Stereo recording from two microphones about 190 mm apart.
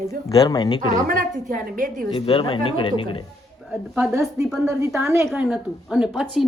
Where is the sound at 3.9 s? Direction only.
10° right (ahead or behind).